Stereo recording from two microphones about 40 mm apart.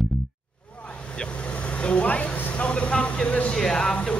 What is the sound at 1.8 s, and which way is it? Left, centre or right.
Speech, left.